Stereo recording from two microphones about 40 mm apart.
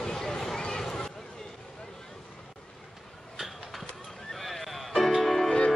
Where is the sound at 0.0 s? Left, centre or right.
Centre.